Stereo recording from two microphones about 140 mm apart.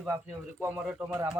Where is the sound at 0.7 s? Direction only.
Centre (ahead or behind).